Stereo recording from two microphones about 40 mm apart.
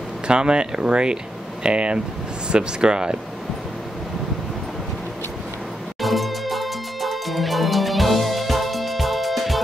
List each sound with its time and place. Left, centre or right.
0.3 s speech: right
5.9 s music: centre